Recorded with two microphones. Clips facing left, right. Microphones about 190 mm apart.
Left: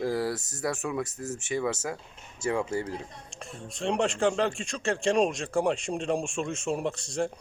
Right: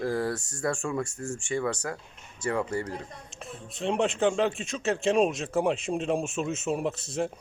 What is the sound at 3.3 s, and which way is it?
Speech, centre (ahead or behind).